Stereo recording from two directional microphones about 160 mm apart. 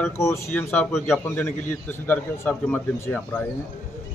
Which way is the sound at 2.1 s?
10° left (ahead or behind).